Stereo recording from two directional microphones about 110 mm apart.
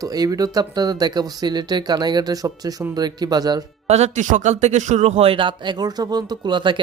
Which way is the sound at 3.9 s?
90° right.